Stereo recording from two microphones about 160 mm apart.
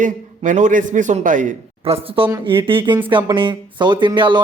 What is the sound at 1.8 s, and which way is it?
A man's voice, 35° right (ahead or behind).